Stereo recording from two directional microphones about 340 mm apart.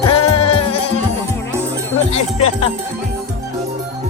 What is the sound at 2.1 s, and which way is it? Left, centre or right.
Speech, centre.